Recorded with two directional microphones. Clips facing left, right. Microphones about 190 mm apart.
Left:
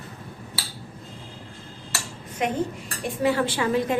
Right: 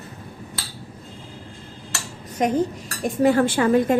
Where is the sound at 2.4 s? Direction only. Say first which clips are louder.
Right 5 dB; 40° right (ahead or behind).